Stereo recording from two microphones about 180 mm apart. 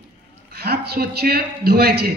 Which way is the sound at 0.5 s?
60° right (ahead or behind).